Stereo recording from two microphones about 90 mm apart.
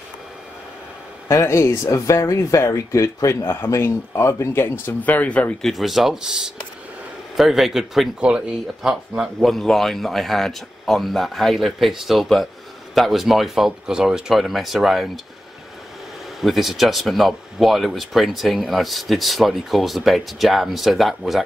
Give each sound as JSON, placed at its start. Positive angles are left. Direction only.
{"t": 1.3, "sound": "speech", "side_deg": 30}
{"t": 3.4, "sound": "speech", "side_deg": 25}
{"t": 5.6, "sound": "speech", "side_deg": 0}
{"t": 16.3, "sound": "speech", "side_deg": 0}